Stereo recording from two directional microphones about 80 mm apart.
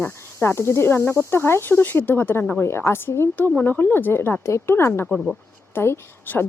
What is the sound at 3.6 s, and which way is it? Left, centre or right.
Speech, left.